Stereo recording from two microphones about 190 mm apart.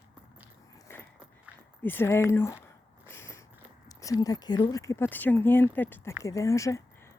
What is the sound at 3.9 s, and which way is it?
Speech, 20° left (ahead or behind).